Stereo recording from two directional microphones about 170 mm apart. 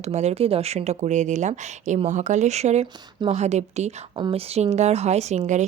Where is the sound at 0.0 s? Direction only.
40° right (ahead or behind).